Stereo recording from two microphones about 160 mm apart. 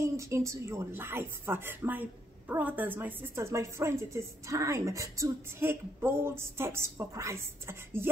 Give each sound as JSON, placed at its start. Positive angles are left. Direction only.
{"t": 0.0, "sound": "speech", "side_deg": -20}